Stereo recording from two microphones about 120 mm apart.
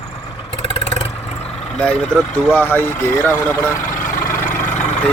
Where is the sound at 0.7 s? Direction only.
60° left (ahead or behind).